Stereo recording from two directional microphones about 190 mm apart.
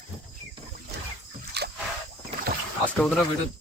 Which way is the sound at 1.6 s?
60° right (ahead or behind).